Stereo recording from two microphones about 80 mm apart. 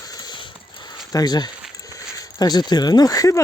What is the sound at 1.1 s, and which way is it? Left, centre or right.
Speech, left.